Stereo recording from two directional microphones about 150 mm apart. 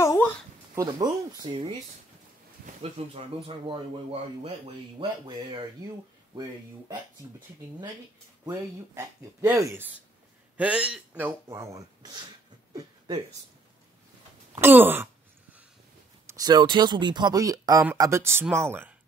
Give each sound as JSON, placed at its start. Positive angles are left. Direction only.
{"t": 0.0, "sound": "a sound", "side_deg": 20}
{"t": 0.7, "sound": "speech", "side_deg": -25}
{"t": 3.0, "sound": "speech", "side_deg": -40}
{"t": 8.5, "sound": "speech", "side_deg": -15}
{"t": 10.6, "sound": "speech", "side_deg": -5}
{"t": 12.7, "sound": "a sound", "side_deg": -30}
{"t": 14.5, "sound": "speech", "side_deg": -15}
{"t": 16.3, "sound": "speech", "side_deg": -25}